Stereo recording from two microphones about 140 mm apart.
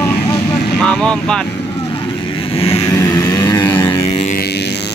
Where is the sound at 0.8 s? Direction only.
5° left (ahead or behind).